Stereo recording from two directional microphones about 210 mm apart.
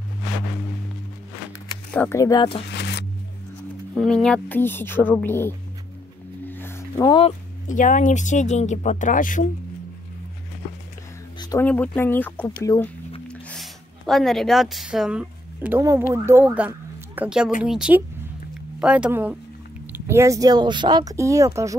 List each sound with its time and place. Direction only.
2.0 s speech: 15° left (ahead or behind)
2.7 s music: 55° left (ahead or behind)
3.9 s speech: 5° left (ahead or behind)
6.5 s a sound: 10° left (ahead or behind)
7.2 s speech: 30° left (ahead or behind)
11.6 s speech: 5° left (ahead or behind)
13.3 s a sound: 5° left (ahead or behind); by 16.0 s 15° right (ahead or behind)
16.3 s speech: 10° right (ahead or behind)